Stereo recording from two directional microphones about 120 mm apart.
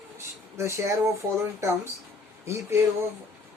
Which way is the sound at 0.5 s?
25° right (ahead or behind).